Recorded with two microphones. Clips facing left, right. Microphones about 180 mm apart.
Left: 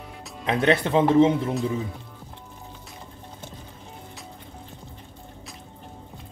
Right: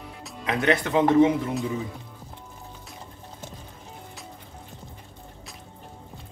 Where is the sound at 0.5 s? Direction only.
30° left (ahead or behind).